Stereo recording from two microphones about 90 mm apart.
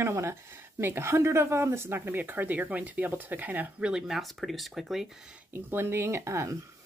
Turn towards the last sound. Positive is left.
turn(degrees=-35)  # may be behind; listen again after turning